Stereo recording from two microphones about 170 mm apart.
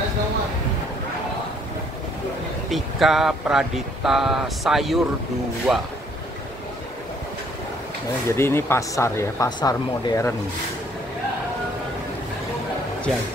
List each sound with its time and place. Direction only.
2.7 s speech: centre (ahead or behind)
8.4 s speech: 15° left (ahead or behind)